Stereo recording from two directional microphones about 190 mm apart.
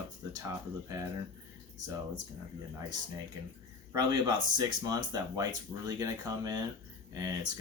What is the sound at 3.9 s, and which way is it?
Speech, 20° right (ahead or behind).